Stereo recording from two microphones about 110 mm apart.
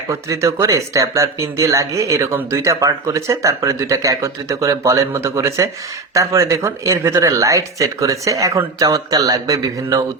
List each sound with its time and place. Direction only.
0.1 s speech: 25° right (ahead or behind)